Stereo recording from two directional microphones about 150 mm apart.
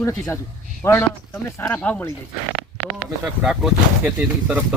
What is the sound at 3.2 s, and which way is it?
Speech, 5° right (ahead or behind).